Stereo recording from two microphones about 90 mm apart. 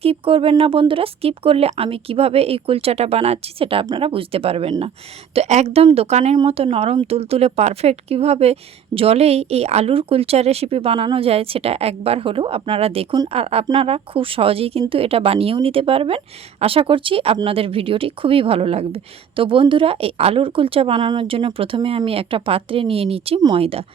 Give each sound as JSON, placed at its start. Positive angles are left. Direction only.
{"t": 0.0, "sound": "speech", "side_deg": -85}
{"t": 8.9, "sound": "a woman's voice", "side_deg": -65}
{"t": 9.8, "sound": "speech", "side_deg": -90}
{"t": 21.1, "sound": "speech", "side_deg": -80}